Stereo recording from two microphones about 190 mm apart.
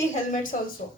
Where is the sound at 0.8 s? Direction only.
45° left (ahead or behind).